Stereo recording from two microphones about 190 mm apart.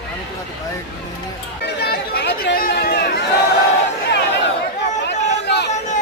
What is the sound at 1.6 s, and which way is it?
Speech, 60° left (ahead or behind).